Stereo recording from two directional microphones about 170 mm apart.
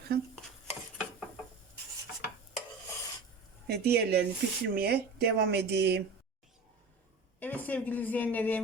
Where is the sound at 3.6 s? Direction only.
70° right (ahead or behind).